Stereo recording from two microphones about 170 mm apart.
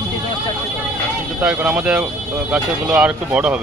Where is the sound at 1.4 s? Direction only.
10° right (ahead or behind).